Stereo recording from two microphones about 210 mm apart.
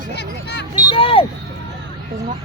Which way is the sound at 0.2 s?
55° left (ahead or behind).